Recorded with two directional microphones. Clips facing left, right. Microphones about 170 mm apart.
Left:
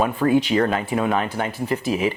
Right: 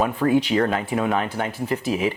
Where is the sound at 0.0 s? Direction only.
15° left (ahead or behind).